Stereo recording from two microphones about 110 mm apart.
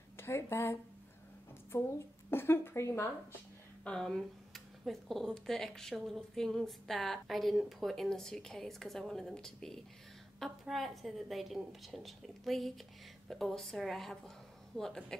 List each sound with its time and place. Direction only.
0.2 s a woman's voice: 25° left (ahead or behind)
2.3 s a woman's voice: 20° left (ahead or behind)
3.8 s a woman's voice: 5° left (ahead or behind)